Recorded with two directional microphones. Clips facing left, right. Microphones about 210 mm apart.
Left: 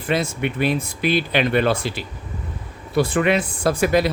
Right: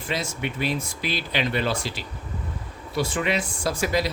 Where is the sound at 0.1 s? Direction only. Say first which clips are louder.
Left 7 dB; 55° left (ahead or behind).